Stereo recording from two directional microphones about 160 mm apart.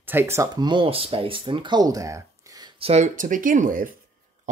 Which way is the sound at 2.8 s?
40° right (ahead or behind).